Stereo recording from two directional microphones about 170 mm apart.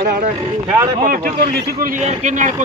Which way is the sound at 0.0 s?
60° right (ahead or behind).